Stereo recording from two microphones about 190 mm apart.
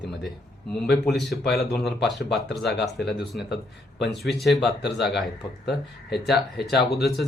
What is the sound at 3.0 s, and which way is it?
Speech, centre (ahead or behind).